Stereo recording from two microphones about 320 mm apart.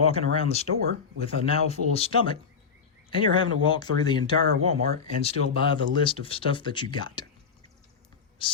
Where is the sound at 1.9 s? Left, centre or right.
Centre.